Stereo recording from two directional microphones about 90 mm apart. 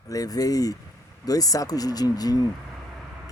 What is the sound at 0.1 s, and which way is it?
Speech, 40° left (ahead or behind).